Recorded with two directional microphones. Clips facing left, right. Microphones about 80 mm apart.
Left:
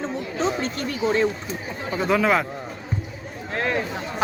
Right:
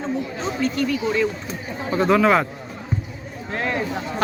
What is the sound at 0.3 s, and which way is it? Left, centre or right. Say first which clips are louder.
Speech: left 1 dB; left.